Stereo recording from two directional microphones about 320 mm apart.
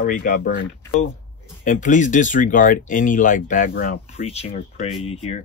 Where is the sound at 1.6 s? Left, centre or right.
Left.